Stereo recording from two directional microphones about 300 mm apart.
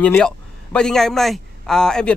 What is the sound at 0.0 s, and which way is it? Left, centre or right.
A man's voice, centre.